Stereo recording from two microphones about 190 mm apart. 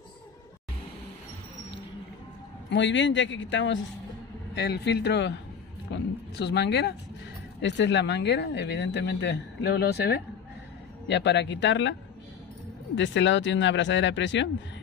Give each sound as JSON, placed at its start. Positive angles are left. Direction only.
{"t": 2.7, "sound": "speech", "side_deg": 75}
{"t": 4.6, "sound": "speech", "side_deg": 60}
{"t": 11.1, "sound": "speech", "side_deg": 70}
{"t": 12.9, "sound": "speech", "side_deg": 75}